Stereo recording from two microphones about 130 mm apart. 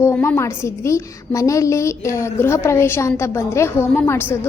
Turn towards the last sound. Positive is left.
turn(degrees=15)  # may be behind; listen again after turning